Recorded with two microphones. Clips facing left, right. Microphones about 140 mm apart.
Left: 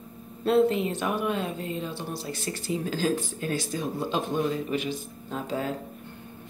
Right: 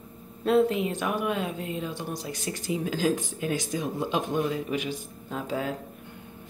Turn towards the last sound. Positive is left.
turn(degrees=-10)  # may be behind; listen again after turning